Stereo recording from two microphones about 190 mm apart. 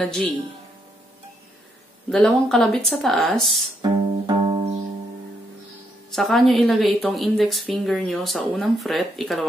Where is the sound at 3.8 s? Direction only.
30° right (ahead or behind).